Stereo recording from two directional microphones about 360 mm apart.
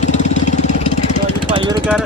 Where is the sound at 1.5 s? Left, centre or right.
Centre.